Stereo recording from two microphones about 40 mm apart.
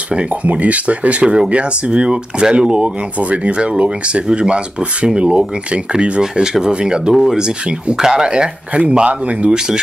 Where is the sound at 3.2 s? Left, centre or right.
Right.